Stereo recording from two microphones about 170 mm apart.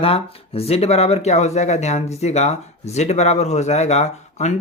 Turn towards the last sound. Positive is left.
turn(degrees=40)  # may be behind; listen again after turning